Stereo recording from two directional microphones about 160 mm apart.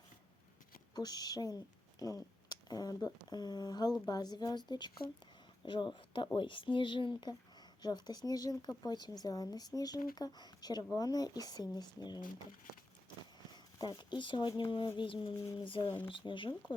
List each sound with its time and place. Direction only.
0.9 s speech: 25° left (ahead or behind)
13.7 s speech: 25° left (ahead or behind)